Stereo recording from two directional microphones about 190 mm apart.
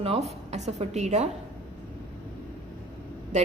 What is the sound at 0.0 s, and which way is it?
A woman's voice, 35° right (ahead or behind).